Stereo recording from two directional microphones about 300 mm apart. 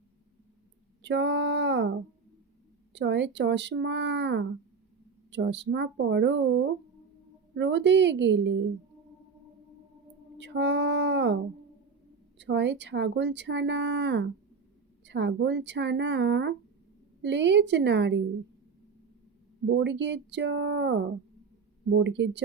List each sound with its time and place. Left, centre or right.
1.0 s speech: right
2.9 s speech: right
7.5 s speech: right
10.3 s speech: right
12.4 s speech: right
19.6 s speech: right